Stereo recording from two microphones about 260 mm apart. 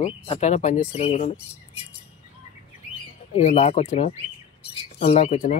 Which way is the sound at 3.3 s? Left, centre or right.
Left.